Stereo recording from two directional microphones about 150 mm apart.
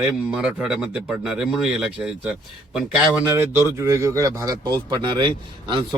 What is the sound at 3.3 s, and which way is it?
A man's voice, 15° right (ahead or behind).